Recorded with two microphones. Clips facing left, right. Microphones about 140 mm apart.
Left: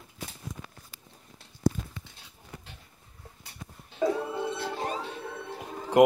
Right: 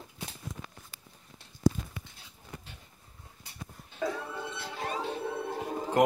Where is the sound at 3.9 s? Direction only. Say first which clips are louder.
Left 6 dB; 25° left (ahead or behind).